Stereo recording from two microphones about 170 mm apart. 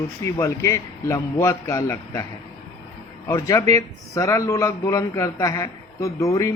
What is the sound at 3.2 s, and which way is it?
A man's voice, 20° left (ahead or behind).